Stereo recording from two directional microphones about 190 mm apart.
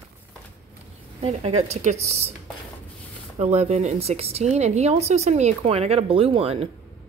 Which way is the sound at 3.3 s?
35° right (ahead or behind).